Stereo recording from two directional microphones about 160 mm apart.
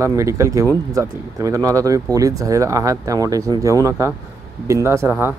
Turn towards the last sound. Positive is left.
turn(degrees=-15)  # may be behind; listen again after turning